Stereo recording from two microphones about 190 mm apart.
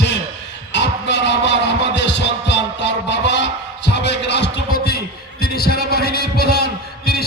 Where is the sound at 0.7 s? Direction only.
65° left (ahead or behind).